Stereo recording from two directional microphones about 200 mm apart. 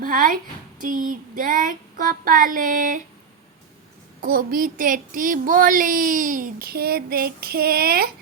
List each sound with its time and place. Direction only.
0.0 s a woman's voice: 45° right (ahead or behind)
0.8 s child singing: 45° right (ahead or behind)
4.2 s child singing: 45° right (ahead or behind)